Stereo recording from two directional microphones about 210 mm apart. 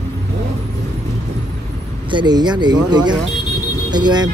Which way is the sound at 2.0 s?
20° right (ahead or behind).